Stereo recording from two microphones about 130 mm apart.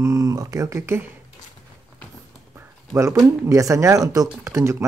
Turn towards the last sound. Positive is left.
turn(degrees=-20)  # may be behind; listen again after turning